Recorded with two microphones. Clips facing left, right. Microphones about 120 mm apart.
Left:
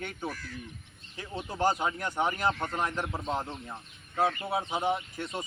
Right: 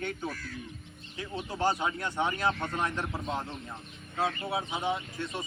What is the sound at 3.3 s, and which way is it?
Speech, 30° left (ahead or behind).